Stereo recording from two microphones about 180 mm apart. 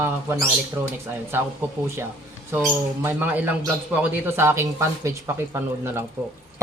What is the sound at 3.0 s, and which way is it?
Speech, 10° right (ahead or behind).